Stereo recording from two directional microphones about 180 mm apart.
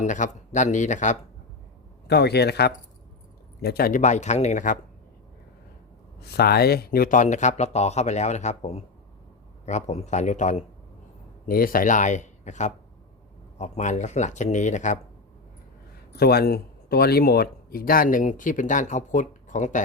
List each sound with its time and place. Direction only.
0.0 s speech: 45° left (ahead or behind)
2.0 s a man's voice: 65° left (ahead or behind); by 4.8 s 45° left (ahead or behind)
6.1 s speech: 65° left (ahead or behind); by 10.6 s 40° left (ahead or behind)
11.4 s speech: 50° left (ahead or behind)
16.1 s speech: 60° left (ahead or behind); by 19.8 s 45° left (ahead or behind)